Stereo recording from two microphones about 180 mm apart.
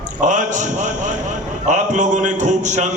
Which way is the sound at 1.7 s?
40° right (ahead or behind).